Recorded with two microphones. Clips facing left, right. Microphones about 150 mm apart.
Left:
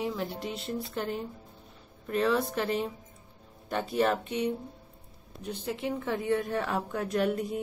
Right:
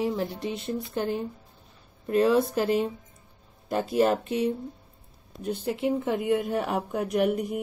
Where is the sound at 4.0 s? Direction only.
35° right (ahead or behind).